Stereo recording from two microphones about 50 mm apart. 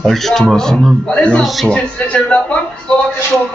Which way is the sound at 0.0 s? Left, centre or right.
Centre.